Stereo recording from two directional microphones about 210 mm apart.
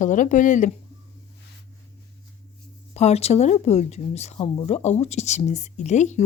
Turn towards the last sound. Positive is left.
turn(degrees=35)  # may be behind; listen again after turning